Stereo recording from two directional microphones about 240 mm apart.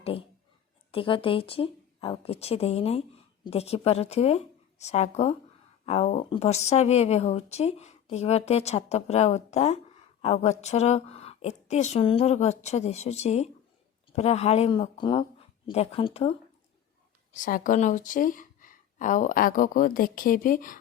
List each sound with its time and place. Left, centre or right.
0.0 s speech: left
17.3 s speech: left